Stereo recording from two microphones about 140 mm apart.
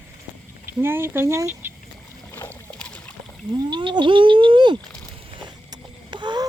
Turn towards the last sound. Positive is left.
turn(degrees=-30)  # may be behind; listen again after turning